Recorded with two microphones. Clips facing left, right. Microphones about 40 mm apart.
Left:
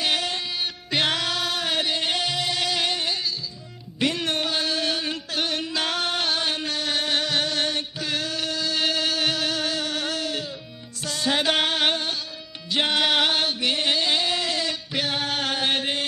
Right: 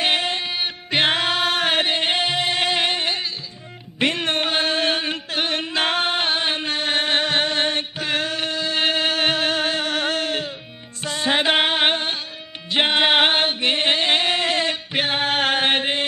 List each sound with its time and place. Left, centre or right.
0.0 s music: right
4.0 s a sound: right
11.1 s music: right
12.7 s singing: right